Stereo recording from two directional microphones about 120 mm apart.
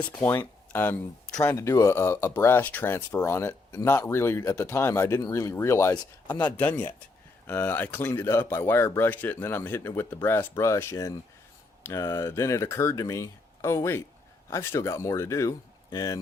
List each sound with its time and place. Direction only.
0.0 s speech: 15° left (ahead or behind); by 16.2 s 30° left (ahead or behind)